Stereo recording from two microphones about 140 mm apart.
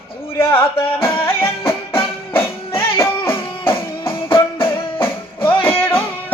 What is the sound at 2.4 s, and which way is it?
Music, 15° left (ahead or behind).